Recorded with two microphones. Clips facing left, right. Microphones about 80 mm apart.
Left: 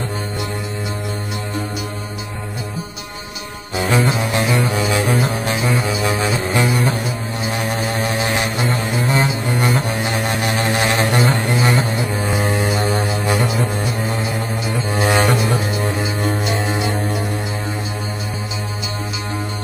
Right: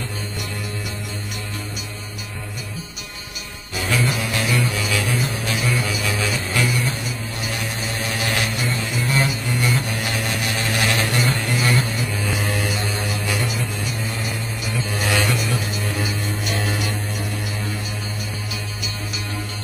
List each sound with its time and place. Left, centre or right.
3.7 s music: left
7.6 s music: left
8.7 s music: left
9.1 s music: left
14.9 s music: left
16.4 s music: left